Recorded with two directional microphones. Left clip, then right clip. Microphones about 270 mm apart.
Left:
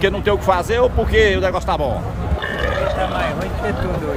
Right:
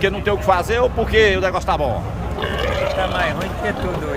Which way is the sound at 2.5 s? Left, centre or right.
Right.